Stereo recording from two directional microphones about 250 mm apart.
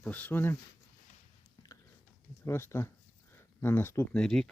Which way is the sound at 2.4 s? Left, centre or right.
Centre.